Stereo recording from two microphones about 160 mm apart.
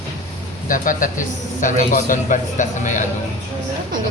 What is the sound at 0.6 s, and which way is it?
A man's voice, 55° left (ahead or behind).